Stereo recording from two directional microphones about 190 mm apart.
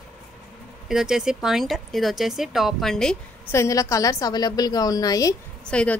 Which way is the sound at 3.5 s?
15° left (ahead or behind).